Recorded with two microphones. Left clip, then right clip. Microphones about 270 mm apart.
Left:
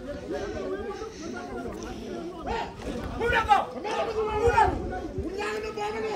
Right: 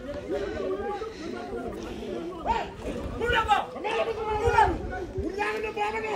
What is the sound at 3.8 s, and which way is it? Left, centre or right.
Chatter, right.